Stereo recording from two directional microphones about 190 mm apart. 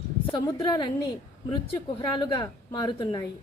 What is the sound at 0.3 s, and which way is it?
Speech, 25° left (ahead or behind).